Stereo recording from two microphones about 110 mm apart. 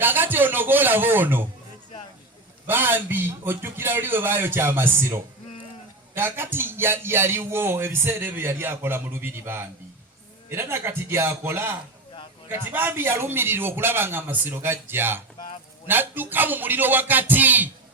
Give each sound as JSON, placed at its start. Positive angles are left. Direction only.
{"t": 0.0, "sound": "a man's voice", "side_deg": -20}
{"t": 2.6, "sound": "speech", "side_deg": -20}
{"t": 15.9, "sound": "a sound", "side_deg": -20}